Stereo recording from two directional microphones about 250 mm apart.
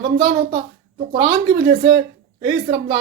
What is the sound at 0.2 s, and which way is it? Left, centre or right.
A woman's voice, centre.